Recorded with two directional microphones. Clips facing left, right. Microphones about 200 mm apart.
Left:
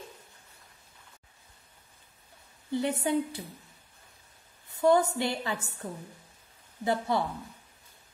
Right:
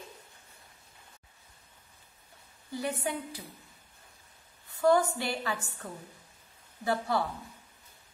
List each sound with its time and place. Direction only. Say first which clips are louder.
2.7 s a woman's voice: left 6 dB; 25° left (ahead or behind)
4.6 s a woman's voice: left 1 dB; 20° left (ahead or behind)